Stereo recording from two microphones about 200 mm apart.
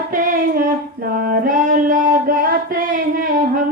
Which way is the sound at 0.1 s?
45° right (ahead or behind).